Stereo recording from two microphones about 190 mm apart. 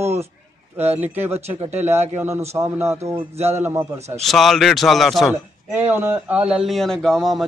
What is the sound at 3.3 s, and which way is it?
Speech, 35° right (ahead or behind).